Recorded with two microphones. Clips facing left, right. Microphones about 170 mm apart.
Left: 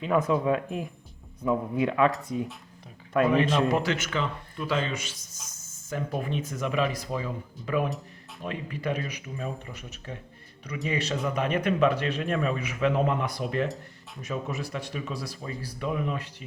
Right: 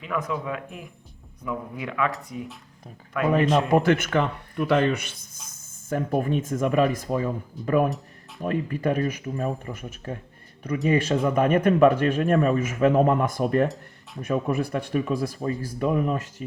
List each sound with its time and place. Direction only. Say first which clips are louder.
0.0 s speech: left 5 dB; 30° left (ahead or behind)
3.1 s speech: left 2 dB; 35° left (ahead or behind)
3.5 s speech: right 5 dB; 50° right (ahead or behind)
5.9 s speech: right 7 dB; 50° right (ahead or behind)